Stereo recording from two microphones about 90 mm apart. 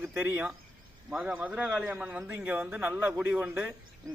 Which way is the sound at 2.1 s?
25° right (ahead or behind).